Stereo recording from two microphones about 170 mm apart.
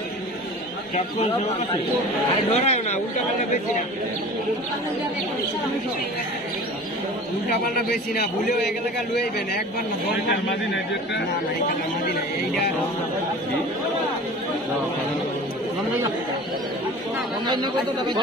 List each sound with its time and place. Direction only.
2.5 s speech: 40° left (ahead or behind)
17.5 s speech: 25° right (ahead or behind)